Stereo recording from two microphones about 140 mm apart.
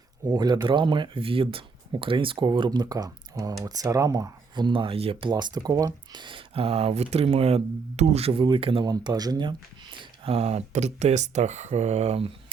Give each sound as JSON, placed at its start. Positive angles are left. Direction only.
{"t": 0.3, "sound": "speech", "side_deg": -30}
{"t": 5.3, "sound": "speech", "side_deg": -30}
{"t": 8.9, "sound": "speech", "side_deg": -30}